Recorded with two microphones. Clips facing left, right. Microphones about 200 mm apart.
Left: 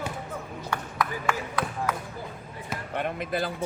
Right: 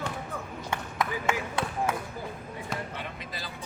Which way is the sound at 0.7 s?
25° right (ahead or behind).